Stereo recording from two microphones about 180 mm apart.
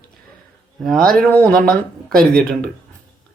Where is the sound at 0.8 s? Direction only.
Centre (ahead or behind).